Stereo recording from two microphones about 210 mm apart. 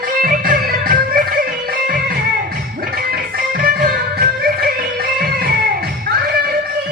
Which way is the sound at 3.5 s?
45° right (ahead or behind).